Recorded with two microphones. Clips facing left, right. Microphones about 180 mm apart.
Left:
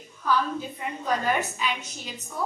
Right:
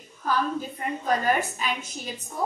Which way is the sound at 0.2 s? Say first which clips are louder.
Even; 45° right (ahead or behind).